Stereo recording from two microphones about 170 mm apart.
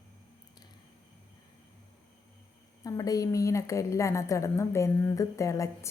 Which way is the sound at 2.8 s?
20° left (ahead or behind).